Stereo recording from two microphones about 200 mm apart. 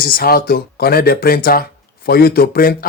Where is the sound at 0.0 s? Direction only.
45° left (ahead or behind).